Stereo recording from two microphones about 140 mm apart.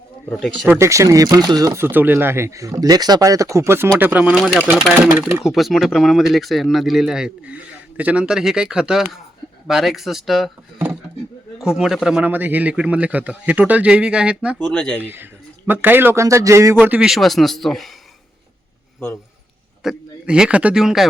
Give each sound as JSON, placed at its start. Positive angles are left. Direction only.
{"t": 0.3, "sound": "speech", "side_deg": 0}
{"t": 0.7, "sound": "speech", "side_deg": -20}
{"t": 11.6, "sound": "speech", "side_deg": -5}
{"t": 14.6, "sound": "speech", "side_deg": 5}
{"t": 15.1, "sound": "speech", "side_deg": -15}
{"t": 16.8, "sound": "speech", "side_deg": -10}
{"t": 18.9, "sound": "a man's voice", "side_deg": 15}
{"t": 19.8, "sound": "a man's voice", "side_deg": -5}